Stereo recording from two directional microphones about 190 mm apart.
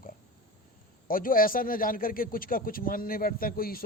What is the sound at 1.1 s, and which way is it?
A man's voice, 50° left (ahead or behind).